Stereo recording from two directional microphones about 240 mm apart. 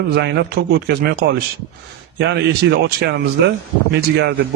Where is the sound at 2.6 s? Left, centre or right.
Right.